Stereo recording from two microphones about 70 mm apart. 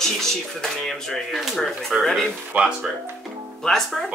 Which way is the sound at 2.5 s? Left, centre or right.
Right.